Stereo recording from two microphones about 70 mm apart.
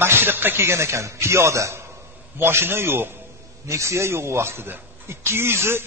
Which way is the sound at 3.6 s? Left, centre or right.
Right.